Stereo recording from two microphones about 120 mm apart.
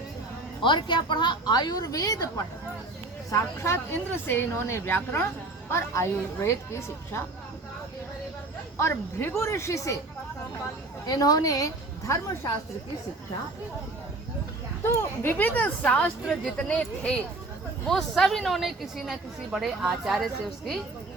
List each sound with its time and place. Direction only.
0.6 s a woman's voice: 40° left (ahead or behind); by 7.3 s 20° left (ahead or behind)
8.8 s speech: 20° left (ahead or behind)
11.0 s a woman's voice: 30° left (ahead or behind)
14.8 s a woman's voice: 20° left (ahead or behind); by 20.8 s centre (ahead or behind)